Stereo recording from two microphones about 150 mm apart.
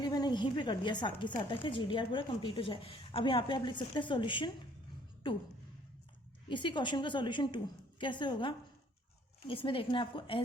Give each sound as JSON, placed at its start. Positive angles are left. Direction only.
{"t": 0.0, "sound": "speech", "side_deg": 30}
{"t": 6.5, "sound": "speech", "side_deg": 35}